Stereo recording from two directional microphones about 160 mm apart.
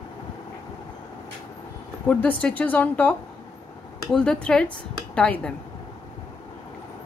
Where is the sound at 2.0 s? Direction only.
10° left (ahead or behind).